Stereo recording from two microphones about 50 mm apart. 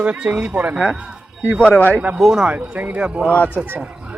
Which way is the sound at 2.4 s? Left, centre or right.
Right.